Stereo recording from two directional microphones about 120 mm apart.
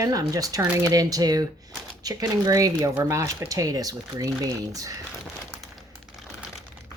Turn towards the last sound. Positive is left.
turn(degrees=-30)  # may be behind; listen again after turning